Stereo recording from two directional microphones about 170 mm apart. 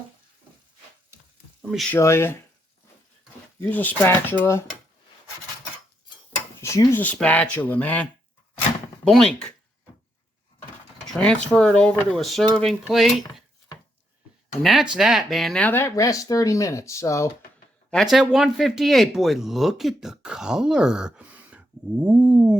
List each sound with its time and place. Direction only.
1.9 s speech: 15° left (ahead or behind)
3.6 s speech: 10° left (ahead or behind)
6.6 s speech: 15° left (ahead or behind)
9.0 s speech: 5° left (ahead or behind)
11.1 s speech: 5° left (ahead or behind)
14.6 s speech: centre (ahead or behind); by 17.2 s 20° left (ahead or behind)
17.9 s speech: centre (ahead or behind)